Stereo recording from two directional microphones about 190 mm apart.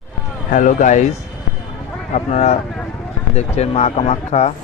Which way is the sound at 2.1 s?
35° left (ahead or behind).